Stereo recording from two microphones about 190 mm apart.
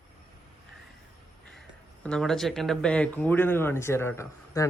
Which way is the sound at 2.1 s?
5° left (ahead or behind).